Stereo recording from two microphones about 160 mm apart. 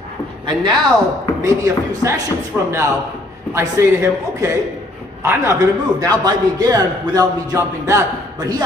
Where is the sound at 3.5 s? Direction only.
15° right (ahead or behind).